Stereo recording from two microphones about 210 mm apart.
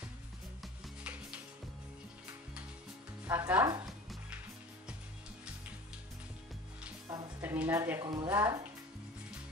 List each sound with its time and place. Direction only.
0.6 s music: centre (ahead or behind)
3.3 s speech: 10° right (ahead or behind)
7.1 s music: 15° right (ahead or behind)
7.5 s speech: 10° right (ahead or behind)